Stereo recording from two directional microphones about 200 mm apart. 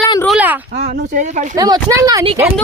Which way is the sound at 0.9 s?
35° right (ahead or behind).